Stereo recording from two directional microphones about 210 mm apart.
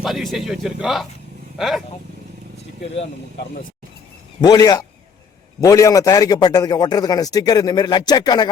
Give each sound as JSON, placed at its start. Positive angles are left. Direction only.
{"t": 0.0, "sound": "speech", "side_deg": 0}
{"t": 4.4, "sound": "a man's voice", "side_deg": 20}